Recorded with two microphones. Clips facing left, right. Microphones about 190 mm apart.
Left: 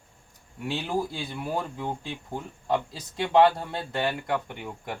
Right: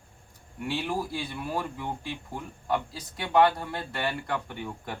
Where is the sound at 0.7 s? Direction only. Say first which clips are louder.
Left 2 dB; 20° left (ahead or behind).